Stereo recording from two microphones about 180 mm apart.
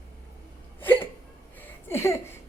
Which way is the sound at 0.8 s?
10° left (ahead or behind).